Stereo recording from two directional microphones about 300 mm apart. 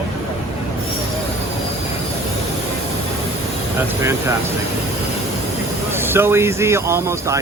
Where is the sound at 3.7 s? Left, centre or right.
Centre.